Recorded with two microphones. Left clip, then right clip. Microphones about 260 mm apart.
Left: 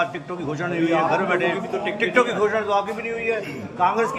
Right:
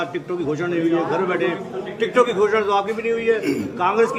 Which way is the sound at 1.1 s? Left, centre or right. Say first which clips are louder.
Even; centre.